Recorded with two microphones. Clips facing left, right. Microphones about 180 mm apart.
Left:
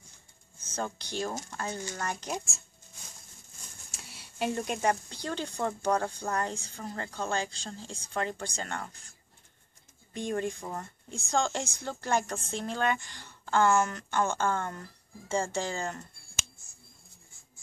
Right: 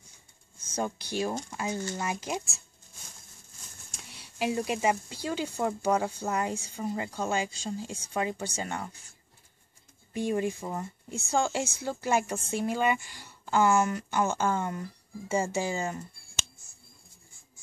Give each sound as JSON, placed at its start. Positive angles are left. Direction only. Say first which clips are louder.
{"t": 0.7, "sound": "speech", "louder": "right 3 dB", "side_deg": -10}
{"t": 3.9, "sound": "speech", "louder": "right 1 dB", "side_deg": 0}
{"t": 10.1, "sound": "speech", "louder": "right 3 dB", "side_deg": -5}